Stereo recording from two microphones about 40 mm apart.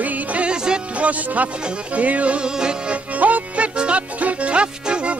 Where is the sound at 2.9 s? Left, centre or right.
Right.